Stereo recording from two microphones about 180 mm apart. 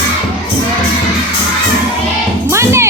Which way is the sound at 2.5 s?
15° right (ahead or behind).